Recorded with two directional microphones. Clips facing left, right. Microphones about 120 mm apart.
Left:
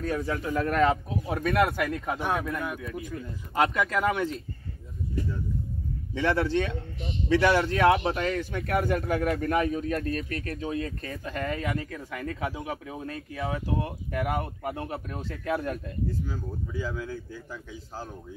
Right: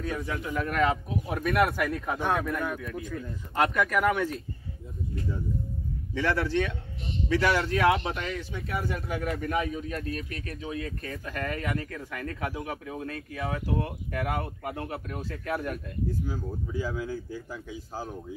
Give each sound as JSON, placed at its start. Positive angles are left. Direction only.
{"t": 0.0, "sound": "a man's voice", "side_deg": 35}
{"t": 2.5, "sound": "speech", "side_deg": 5}
{"t": 6.1, "sound": "speech", "side_deg": 25}
{"t": 8.1, "sound": "speech", "side_deg": 40}
{"t": 11.1, "sound": "speech", "side_deg": 20}
{"t": 16.3, "sound": "speech", "side_deg": -10}